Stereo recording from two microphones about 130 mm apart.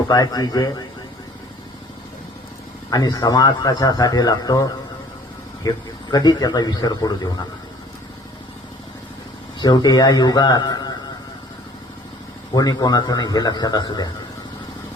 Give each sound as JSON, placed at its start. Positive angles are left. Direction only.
{"t": 0.1, "sound": "a man's voice", "side_deg": 30}
{"t": 2.9, "sound": "a man's voice", "side_deg": 30}
{"t": 9.6, "sound": "a man's voice", "side_deg": 30}
{"t": 12.5, "sound": "a man's voice", "side_deg": 30}